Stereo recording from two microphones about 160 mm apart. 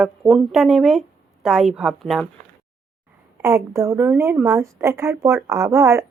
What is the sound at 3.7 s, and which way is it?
Speech, 15° right (ahead or behind).